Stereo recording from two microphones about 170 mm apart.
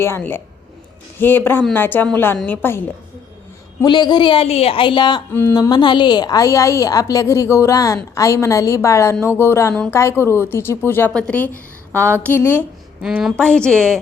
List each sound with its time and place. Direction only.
0.0 s a woman's voice: 15° left (ahead or behind)
3.8 s a woman's voice: 25° left (ahead or behind)
5.3 s a woman's voice: 15° left (ahead or behind)
5.5 s a woman's voice: 25° left (ahead or behind)
13.0 s a woman's voice: 5° right (ahead or behind)